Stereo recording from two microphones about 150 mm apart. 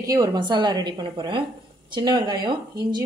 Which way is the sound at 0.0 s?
25° right (ahead or behind).